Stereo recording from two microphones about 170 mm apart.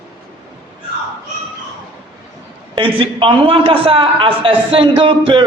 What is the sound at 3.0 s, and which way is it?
A man's voice, 30° right (ahead or behind).